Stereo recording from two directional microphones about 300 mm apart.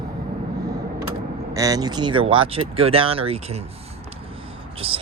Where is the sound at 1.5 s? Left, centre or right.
Centre.